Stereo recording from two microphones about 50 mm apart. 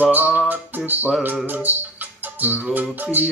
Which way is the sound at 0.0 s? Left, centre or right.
Right.